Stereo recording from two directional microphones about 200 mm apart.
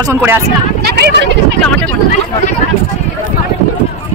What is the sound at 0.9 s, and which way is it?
Speech, 55° right (ahead or behind).